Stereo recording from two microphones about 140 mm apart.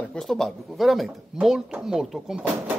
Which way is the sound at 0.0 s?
5° left (ahead or behind).